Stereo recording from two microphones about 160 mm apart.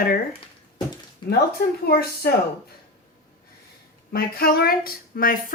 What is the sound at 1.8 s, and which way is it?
Speech, 70° left (ahead or behind).